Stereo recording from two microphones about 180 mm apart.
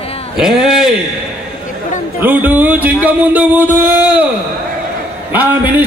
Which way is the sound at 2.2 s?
10° right (ahead or behind).